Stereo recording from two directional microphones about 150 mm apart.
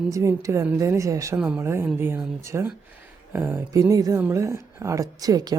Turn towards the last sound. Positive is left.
turn(degrees=-25)  # may be behind; listen again after turning